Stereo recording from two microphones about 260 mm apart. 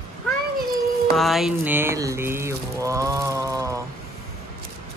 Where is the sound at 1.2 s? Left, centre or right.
Centre.